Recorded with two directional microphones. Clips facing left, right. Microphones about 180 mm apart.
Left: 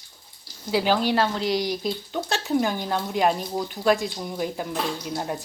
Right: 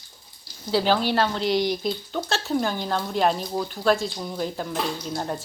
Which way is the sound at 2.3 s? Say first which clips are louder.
Left 2 dB; 15° left (ahead or behind).